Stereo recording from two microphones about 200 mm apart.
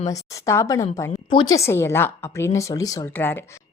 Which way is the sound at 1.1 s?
25° left (ahead or behind).